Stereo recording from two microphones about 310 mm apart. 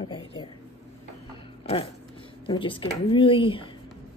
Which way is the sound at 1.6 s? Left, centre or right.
Centre.